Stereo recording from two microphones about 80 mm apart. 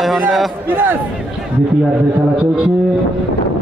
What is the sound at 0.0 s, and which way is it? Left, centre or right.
Speech, centre.